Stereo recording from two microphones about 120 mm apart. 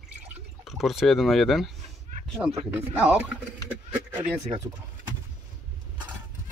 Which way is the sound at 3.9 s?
15° right (ahead or behind).